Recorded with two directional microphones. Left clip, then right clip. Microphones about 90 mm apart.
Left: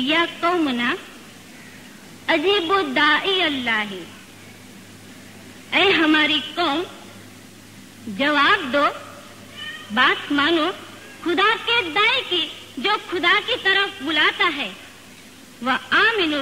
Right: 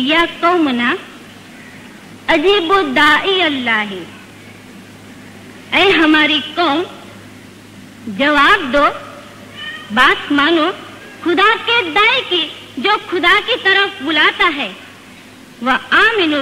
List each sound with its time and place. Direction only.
0.0 s a woman's voice: 35° right (ahead or behind)
0.3 s a woman's voice: 20° right (ahead or behind)
2.2 s a woman's voice: 20° right (ahead or behind)
5.7 s a woman's voice: 15° right (ahead or behind)
8.2 s a woman's voice: 25° right (ahead or behind)
9.6 s cat: 30° right (ahead or behind)
11.6 s a woman's voice: 25° right (ahead or behind)